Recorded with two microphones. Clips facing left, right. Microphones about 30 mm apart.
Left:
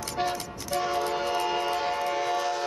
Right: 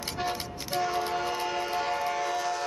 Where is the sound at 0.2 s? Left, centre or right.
Centre.